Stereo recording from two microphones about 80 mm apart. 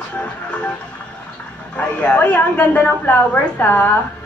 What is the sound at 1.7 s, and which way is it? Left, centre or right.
A woman's voice, centre.